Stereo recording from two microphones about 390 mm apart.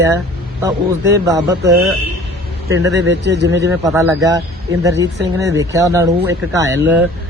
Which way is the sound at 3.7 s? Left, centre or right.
Centre.